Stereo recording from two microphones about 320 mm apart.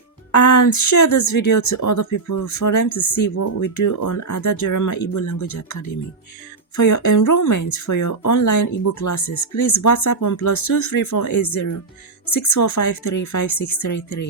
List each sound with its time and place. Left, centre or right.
0.3 s speech: left